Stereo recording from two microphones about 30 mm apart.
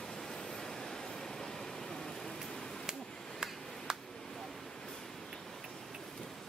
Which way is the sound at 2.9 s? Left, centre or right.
Right.